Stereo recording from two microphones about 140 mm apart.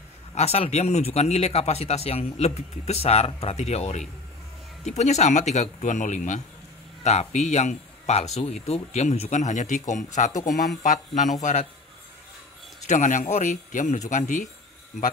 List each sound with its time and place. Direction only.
0.3 s a man's voice: 50° left (ahead or behind)
12.8 s a man's voice: 60° left (ahead or behind)